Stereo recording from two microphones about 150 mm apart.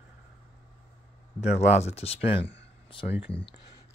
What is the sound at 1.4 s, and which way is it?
Speech, 45° left (ahead or behind).